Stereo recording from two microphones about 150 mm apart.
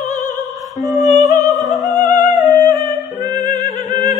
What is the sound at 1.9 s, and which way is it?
Music, 25° right (ahead or behind).